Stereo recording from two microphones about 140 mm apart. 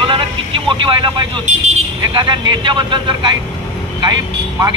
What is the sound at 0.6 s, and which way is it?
Speech, 35° right (ahead or behind).